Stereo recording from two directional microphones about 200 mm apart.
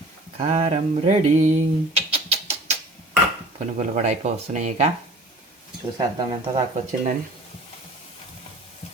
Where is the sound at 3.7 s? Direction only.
35° right (ahead or behind).